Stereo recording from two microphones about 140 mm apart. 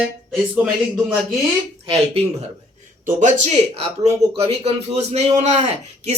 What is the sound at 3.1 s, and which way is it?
Speech, 60° right (ahead or behind).